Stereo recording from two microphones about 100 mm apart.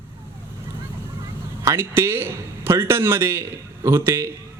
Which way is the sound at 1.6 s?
25° right (ahead or behind).